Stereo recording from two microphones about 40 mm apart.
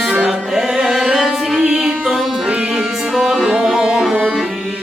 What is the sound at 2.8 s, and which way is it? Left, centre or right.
Music, centre.